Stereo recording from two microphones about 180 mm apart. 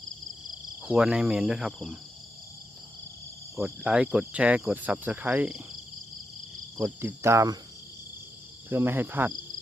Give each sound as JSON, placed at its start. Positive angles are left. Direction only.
{"t": 0.8, "sound": "cricket", "side_deg": -5}
{"t": 3.6, "sound": "cricket", "side_deg": -5}
{"t": 6.7, "sound": "cricket", "side_deg": -15}
{"t": 8.7, "sound": "cricket", "side_deg": -10}